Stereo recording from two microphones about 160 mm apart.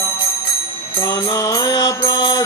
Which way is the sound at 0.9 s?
20° left (ahead or behind).